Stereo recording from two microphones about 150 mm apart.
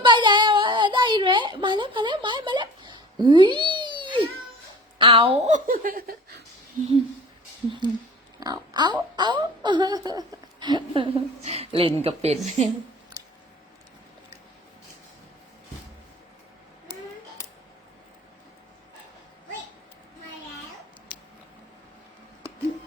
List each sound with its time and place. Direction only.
0.0 s a sound: 30° right (ahead or behind)
4.9 s speech: 35° right (ahead or behind)
5.5 s speech: 60° right (ahead or behind); by 6.4 s 90° right
6.8 s speech: 55° right (ahead or behind)
8.4 s speech: 25° right (ahead or behind); by 12.6 s 50° right (ahead or behind)
13.2 s a sound: 25° right (ahead or behind)